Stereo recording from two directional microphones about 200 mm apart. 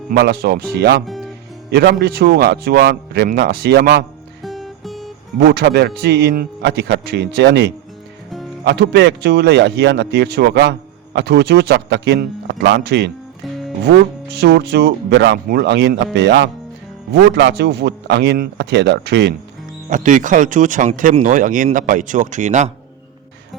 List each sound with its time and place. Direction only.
0.1 s a man's voice: 55° right (ahead or behind)
1.0 s music: centre (ahead or behind)
1.7 s a man's voice: 55° right (ahead or behind)
4.4 s music: centre (ahead or behind)
5.5 s speech: 60° right (ahead or behind)
13.4 s music: centre (ahead or behind)
13.8 s speech: 55° right (ahead or behind)
19.9 s speech: 40° right (ahead or behind)